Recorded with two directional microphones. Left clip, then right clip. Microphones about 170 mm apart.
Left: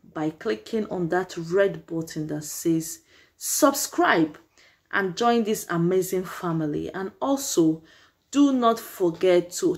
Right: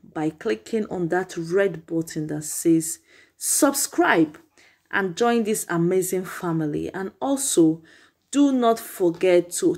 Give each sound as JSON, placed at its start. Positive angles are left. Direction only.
{"t": 0.1, "sound": "speech", "side_deg": -20}